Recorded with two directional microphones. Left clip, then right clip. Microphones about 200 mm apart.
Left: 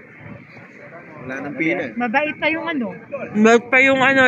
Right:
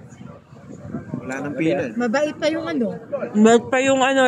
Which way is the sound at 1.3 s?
60° right (ahead or behind).